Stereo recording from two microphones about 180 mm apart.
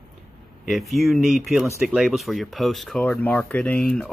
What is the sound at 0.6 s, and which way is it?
Speech, centre (ahead or behind).